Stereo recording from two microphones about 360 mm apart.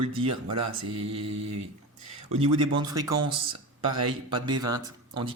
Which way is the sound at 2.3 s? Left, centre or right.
Centre.